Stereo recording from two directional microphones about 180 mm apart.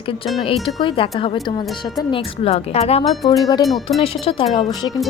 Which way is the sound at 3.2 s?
20° left (ahead or behind).